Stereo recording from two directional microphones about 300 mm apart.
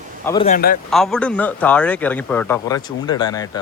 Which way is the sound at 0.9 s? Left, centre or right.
Centre.